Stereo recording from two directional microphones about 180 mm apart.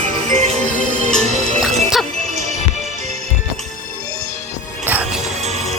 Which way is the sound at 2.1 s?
40° right (ahead or behind).